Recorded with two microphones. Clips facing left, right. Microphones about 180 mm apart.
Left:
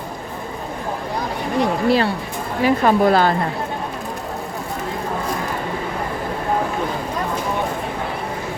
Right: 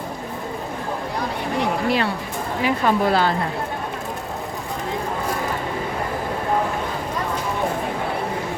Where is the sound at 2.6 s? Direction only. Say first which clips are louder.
Left 5 dB; 45° left (ahead or behind).